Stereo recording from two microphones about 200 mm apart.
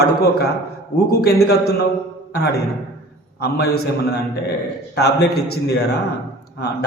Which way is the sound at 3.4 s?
55° left (ahead or behind).